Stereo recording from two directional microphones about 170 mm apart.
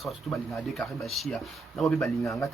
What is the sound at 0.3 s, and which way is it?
Speech, centre (ahead or behind).